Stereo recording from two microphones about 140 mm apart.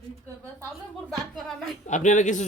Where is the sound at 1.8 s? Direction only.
60° left (ahead or behind).